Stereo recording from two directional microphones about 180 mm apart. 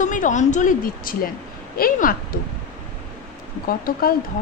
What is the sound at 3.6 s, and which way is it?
Speech, 50° left (ahead or behind).